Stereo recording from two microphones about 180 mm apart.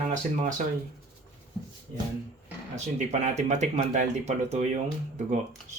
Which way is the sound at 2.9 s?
40° right (ahead or behind).